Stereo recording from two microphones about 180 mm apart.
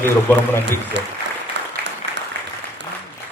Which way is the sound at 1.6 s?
75° right (ahead or behind).